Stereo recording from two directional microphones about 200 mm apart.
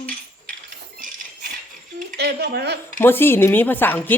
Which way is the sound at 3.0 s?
10° left (ahead or behind).